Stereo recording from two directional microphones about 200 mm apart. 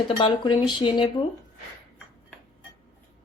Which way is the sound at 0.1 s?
25° left (ahead or behind).